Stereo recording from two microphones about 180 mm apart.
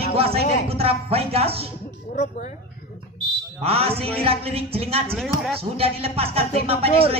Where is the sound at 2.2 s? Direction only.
40° left (ahead or behind).